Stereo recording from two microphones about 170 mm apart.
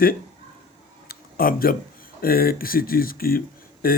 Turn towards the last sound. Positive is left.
turn(degrees=60)  # may be behind; listen again after turning